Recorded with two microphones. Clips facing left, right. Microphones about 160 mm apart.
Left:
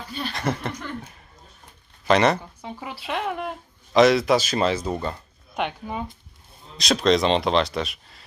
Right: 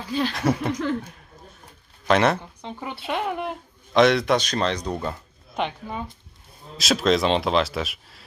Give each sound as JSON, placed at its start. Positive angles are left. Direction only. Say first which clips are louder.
{"t": 0.1, "sound": "speech", "louder": "right 8 dB", "side_deg": -90}
{"t": 0.3, "sound": "speech", "louder": "even", "side_deg": -10}
{"t": 2.0, "sound": "speech", "louder": "left 1 dB", "side_deg": 0}